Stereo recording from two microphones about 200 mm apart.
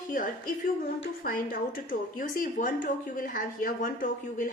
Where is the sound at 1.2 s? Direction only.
45° left (ahead or behind).